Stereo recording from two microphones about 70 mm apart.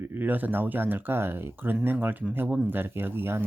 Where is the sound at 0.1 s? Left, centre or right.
Right.